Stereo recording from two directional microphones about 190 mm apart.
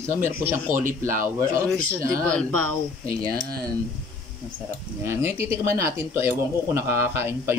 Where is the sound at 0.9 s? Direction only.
45° right (ahead or behind).